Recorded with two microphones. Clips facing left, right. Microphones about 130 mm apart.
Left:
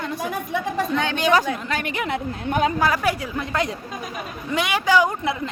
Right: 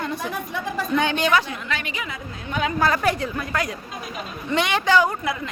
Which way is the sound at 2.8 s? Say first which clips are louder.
Even; 10° left (ahead or behind).